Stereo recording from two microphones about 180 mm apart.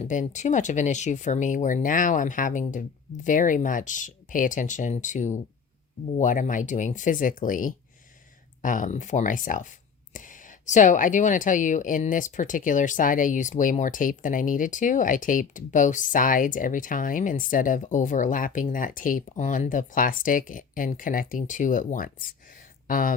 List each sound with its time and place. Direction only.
0.0 s speech: 45° left (ahead or behind)